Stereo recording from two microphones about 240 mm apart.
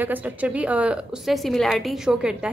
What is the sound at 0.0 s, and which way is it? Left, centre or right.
A woman's voice, centre.